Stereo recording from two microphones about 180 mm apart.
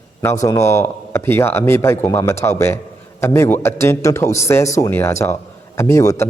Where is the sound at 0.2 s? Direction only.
15° left (ahead or behind).